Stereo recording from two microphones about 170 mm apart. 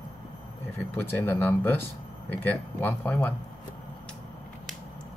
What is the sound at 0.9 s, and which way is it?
Speech, 15° left (ahead or behind).